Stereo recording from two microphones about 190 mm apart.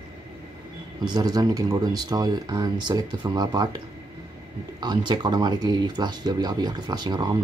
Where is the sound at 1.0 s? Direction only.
20° right (ahead or behind).